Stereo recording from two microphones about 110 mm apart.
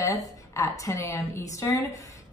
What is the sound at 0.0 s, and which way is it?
A woman's voice, 30° left (ahead or behind).